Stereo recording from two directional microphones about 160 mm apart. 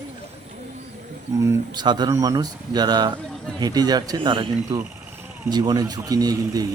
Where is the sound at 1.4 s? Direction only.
20° right (ahead or behind).